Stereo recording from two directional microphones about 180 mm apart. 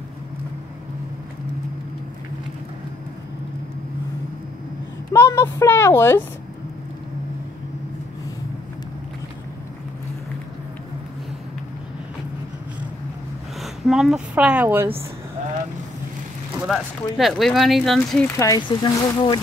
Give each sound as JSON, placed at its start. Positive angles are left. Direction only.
{"t": 5.1, "sound": "speech", "side_deg": 15}
{"t": 13.6, "sound": "speech", "side_deg": 0}
{"t": 16.6, "sound": "speech", "side_deg": 0}
{"t": 18.4, "sound": "speech", "side_deg": 20}